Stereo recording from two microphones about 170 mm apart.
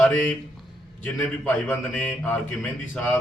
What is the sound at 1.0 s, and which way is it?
A man's voice, 5° left (ahead or behind).